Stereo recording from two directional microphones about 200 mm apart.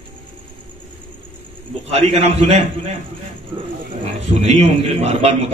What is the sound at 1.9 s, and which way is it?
A man's voice, 30° right (ahead or behind).